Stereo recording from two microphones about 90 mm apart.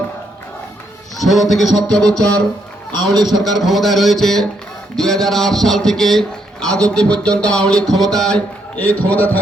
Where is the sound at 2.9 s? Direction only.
50° right (ahead or behind).